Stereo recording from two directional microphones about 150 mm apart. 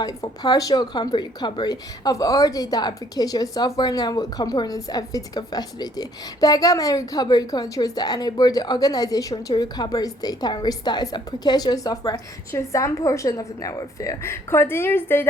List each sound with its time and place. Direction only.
0.0 s a woman's voice: 25° left (ahead or behind)